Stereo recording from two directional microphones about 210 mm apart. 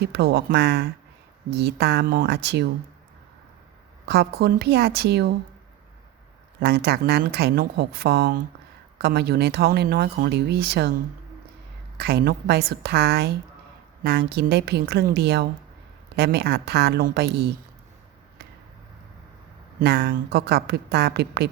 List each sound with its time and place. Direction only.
0.0 s speech: 50° right (ahead or behind)
4.0 s speech: 50° right (ahead or behind)
6.6 s speech: 50° right (ahead or behind)
11.9 s speech: 50° right (ahead or behind)
19.8 s speech: 50° right (ahead or behind)